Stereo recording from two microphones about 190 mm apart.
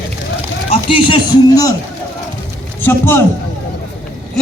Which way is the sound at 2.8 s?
10° left (ahead or behind).